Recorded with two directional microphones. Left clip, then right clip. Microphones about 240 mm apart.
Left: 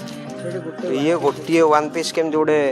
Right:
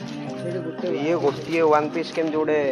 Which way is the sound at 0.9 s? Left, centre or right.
Left.